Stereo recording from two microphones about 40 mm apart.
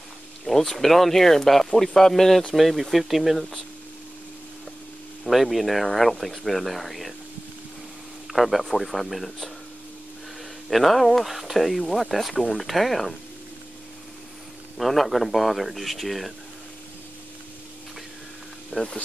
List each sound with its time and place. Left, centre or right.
0.5 s speech: centre
5.3 s speech: centre
8.3 s speech: centre
10.7 s speech: centre
11.2 s speech: centre
14.8 s speech: centre
18.7 s speech: left